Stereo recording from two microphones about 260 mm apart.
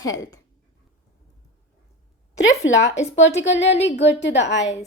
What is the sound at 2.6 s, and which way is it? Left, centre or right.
A woman's voice, left.